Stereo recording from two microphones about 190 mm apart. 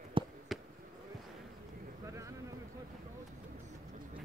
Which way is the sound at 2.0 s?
15° right (ahead or behind).